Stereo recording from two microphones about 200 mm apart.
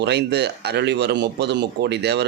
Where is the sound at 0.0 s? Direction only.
55° right (ahead or behind).